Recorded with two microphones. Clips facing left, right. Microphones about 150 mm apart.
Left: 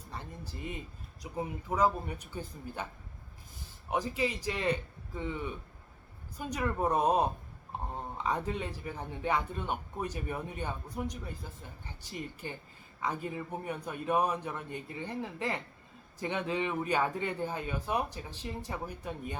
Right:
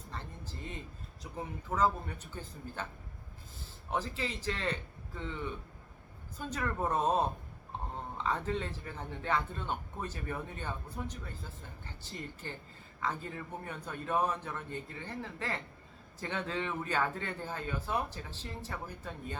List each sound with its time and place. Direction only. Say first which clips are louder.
0.1 s a man's voice: left 2 dB; 15° left (ahead or behind)
3.8 s a man's voice: left 4 dB; 15° left (ahead or behind)